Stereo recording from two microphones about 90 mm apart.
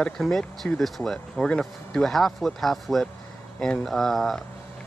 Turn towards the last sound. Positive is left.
turn(degrees=0)  # may be behind; listen again after turning